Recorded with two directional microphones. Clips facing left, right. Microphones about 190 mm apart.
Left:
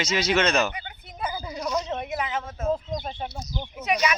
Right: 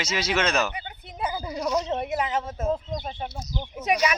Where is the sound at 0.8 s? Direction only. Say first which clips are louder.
Right 2 dB; 30° right (ahead or behind).